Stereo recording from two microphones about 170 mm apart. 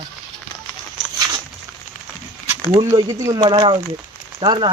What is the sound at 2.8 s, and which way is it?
Speech, 20° right (ahead or behind).